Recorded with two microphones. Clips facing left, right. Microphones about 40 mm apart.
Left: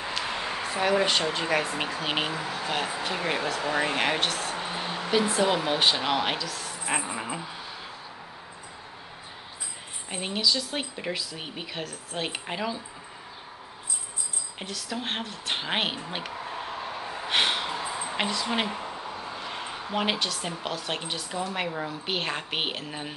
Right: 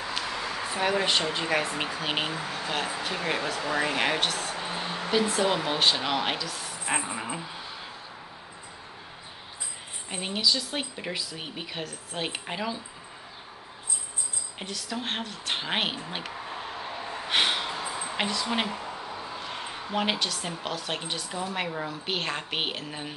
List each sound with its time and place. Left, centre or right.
0.3 s a sound: left
0.6 s a woman's voice: centre
3.6 s speech: centre
4.0 s a woman's voice: centre
4.6 s a sound: centre
5.1 s a woman's voice: centre
10.0 s a woman's voice: centre
14.6 s a sound: centre
19.2 s a woman's voice: centre